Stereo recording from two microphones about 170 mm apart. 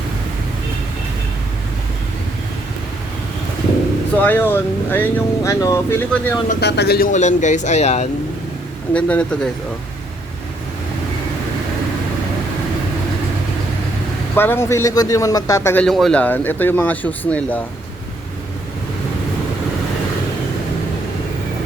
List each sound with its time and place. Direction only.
4.2 s speech: 10° left (ahead or behind)
6.6 s speech: 75° left (ahead or behind)
7.1 s speech: 45° left (ahead or behind)
8.9 s speech: 5° left (ahead or behind)
14.3 s speech: 15° left (ahead or behind)